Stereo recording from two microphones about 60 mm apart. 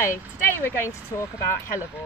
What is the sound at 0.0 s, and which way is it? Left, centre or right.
Speech, left.